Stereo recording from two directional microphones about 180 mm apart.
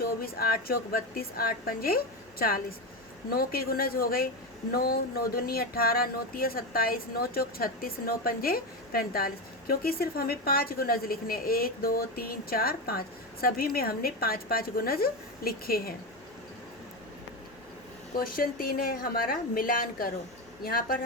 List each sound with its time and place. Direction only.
0.0 s speech: 55° left (ahead or behind)
3.3 s speech: 55° left (ahead or behind)
18.1 s a woman's voice: 55° left (ahead or behind)